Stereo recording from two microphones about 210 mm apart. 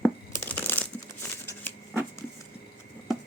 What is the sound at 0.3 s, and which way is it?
Crumpling, 10° left (ahead or behind).